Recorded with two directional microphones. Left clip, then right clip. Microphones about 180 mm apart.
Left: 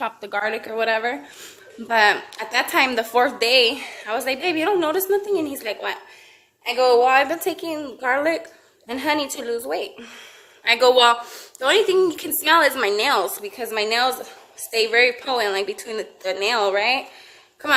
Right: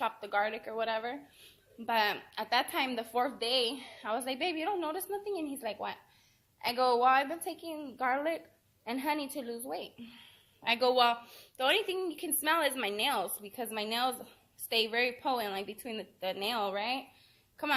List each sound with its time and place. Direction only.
0.0 s a woman's voice: 30° left (ahead or behind)